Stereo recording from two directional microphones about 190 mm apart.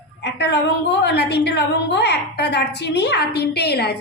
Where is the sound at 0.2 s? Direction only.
65° left (ahead or behind).